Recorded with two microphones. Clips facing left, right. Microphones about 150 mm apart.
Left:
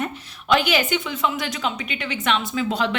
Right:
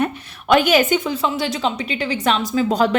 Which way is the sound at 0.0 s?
50° right (ahead or behind).